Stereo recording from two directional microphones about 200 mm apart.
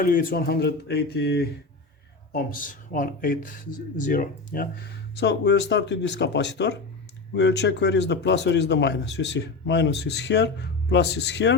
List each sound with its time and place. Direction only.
0.0 s speech: 45° left (ahead or behind)
2.3 s speech: 45° left (ahead or behind); by 11.5 s 60° left (ahead or behind)